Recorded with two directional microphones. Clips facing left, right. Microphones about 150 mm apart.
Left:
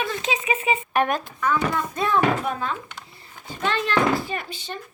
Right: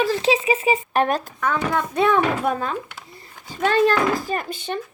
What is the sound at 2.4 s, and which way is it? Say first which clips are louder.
Speech: right 4 dB; 45° right (ahead or behind).